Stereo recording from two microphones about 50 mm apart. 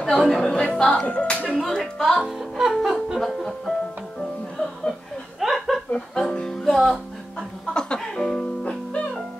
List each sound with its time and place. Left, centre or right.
0.0 s speech: centre
0.5 s speech: centre
1.6 s speech: centre
2.2 s music: centre
2.7 s music: centre
3.2 s speech: centre
4.2 s music: centre
5.4 s a sound: centre
5.9 s music: centre
7.7 s music: centre